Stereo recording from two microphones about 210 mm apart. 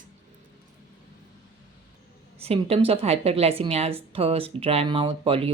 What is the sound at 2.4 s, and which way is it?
A woman's voice, 30° right (ahead or behind).